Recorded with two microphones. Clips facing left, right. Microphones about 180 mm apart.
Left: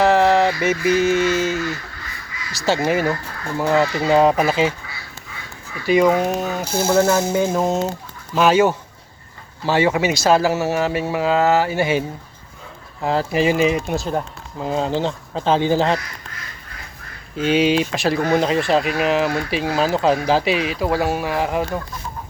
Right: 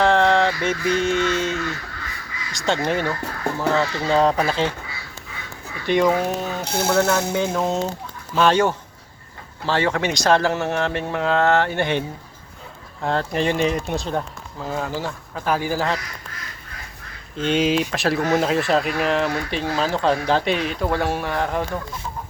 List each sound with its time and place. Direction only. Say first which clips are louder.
0.0 s a sound: left 2 dB; 5° left (ahead or behind)
2.5 s speech: left 3 dB; 5° left (ahead or behind)
5.8 s speech: left 3 dB; 5° left (ahead or behind)
14.6 s speech: left 6 dB; 20° left (ahead or behind)
17.3 s speech: left 3 dB; 5° left (ahead or behind)